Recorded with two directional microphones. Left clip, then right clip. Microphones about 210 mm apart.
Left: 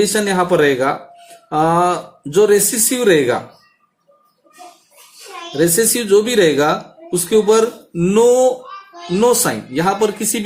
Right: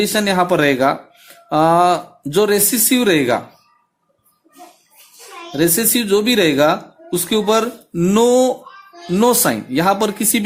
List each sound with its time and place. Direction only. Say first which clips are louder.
0.1 s speech: even; 40° right (ahead or behind)
5.5 s speech: left 2 dB; 35° right (ahead or behind)